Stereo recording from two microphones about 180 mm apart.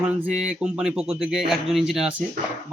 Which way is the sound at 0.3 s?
5° right (ahead or behind).